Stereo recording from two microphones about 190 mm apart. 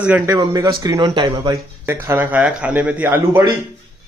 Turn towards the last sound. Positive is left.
turn(degrees=-15)  # may be behind; listen again after turning